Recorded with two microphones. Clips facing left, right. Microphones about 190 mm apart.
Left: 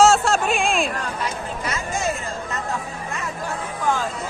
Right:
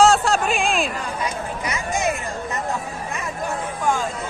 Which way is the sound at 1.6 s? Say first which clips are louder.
Right 2 dB; 15° right (ahead or behind).